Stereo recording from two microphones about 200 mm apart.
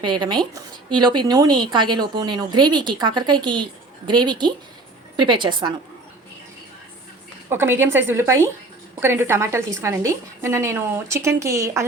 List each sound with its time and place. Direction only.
0.0 s speech: 25° right (ahead or behind)
7.5 s a woman's voice: 10° right (ahead or behind)